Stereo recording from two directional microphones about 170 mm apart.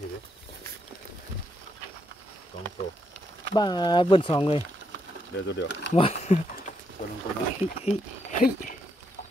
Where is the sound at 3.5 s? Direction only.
25° left (ahead or behind).